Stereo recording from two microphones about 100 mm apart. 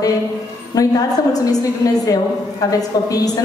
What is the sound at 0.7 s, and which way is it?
A woman's voice, 40° left (ahead or behind).